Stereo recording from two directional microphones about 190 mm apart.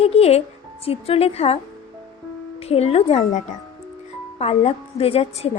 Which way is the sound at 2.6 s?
30° left (ahead or behind).